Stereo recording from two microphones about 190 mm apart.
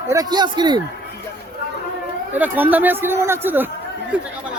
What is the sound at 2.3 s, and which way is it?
Speech, 10° right (ahead or behind).